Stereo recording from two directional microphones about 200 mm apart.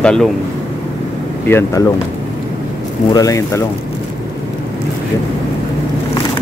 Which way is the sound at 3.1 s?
15° left (ahead or behind).